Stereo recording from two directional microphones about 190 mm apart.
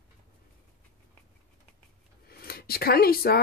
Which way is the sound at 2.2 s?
55° left (ahead or behind).